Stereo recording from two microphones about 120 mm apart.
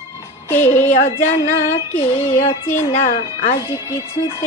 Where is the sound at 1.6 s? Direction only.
65° left (ahead or behind).